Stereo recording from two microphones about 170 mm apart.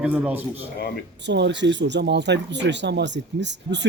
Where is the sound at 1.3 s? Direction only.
90° right.